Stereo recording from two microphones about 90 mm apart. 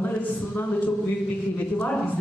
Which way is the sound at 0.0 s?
20° left (ahead or behind).